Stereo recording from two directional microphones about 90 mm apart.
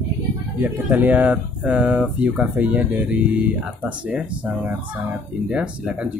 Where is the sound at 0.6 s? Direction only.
20° right (ahead or behind).